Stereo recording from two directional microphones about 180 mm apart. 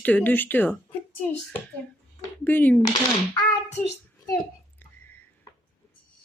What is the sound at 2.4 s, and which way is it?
Speech, 10° left (ahead or behind).